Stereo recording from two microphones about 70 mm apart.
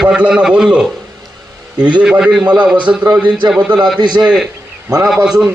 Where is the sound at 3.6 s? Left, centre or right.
Right.